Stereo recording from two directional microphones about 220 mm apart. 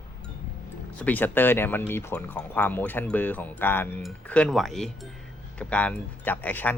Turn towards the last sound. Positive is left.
turn(degrees=10)  # may be behind; listen again after turning